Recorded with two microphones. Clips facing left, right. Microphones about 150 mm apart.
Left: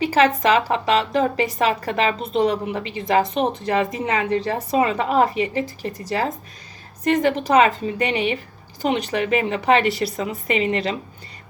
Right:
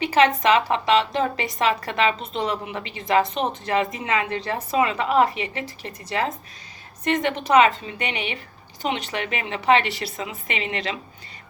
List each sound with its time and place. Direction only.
0.0 s a woman's voice: 35° left (ahead or behind)